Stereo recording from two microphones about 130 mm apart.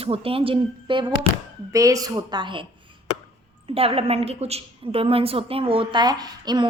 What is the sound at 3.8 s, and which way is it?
A woman's voice, 50° right (ahead or behind).